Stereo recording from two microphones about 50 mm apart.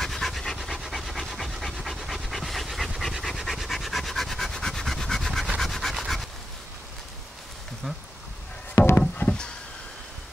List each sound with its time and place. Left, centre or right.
0.0 s pant: centre
0.6 s pant: centre
5.6 s rub: centre
9.2 s a sound: left